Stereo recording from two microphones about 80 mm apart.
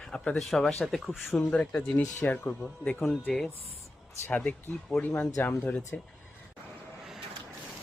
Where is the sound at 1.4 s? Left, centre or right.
Centre.